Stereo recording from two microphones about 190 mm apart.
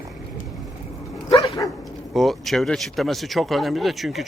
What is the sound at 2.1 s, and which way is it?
Speech, centre (ahead or behind).